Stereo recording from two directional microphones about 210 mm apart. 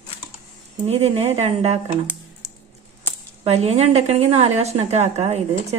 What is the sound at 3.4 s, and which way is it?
A woman's voice, 30° right (ahead or behind).